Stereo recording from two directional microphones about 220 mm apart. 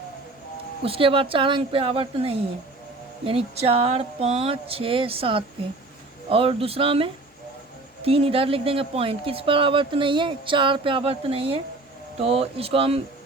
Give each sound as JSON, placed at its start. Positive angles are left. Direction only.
{"t": 0.8, "sound": "speech", "side_deg": -25}